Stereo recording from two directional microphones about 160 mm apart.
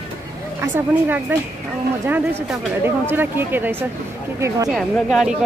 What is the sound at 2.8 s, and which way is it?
Speech, 15° right (ahead or behind).